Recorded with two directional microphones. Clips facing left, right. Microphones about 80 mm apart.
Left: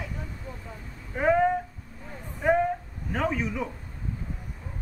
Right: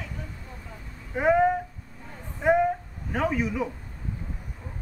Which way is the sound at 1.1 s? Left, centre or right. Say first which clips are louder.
Right 1 dB; centre.